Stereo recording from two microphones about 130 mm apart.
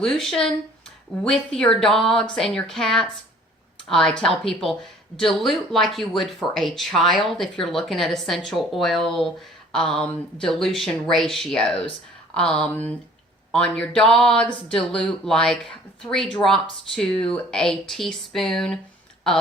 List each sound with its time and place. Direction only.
0.0 s speech: centre (ahead or behind)